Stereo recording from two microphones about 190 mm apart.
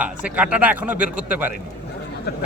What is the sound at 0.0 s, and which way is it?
Speech, 5° right (ahead or behind).